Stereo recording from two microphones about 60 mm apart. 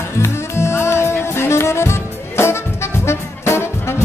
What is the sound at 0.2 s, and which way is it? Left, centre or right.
Music, left.